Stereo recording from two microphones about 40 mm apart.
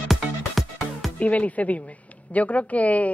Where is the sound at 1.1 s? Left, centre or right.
Left.